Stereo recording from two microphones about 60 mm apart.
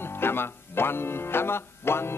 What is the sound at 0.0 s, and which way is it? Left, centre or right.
Speech, left.